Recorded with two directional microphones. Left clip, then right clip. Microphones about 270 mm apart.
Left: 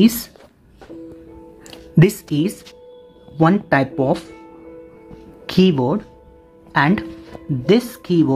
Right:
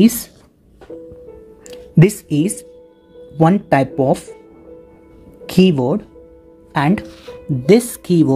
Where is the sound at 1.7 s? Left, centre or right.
Centre.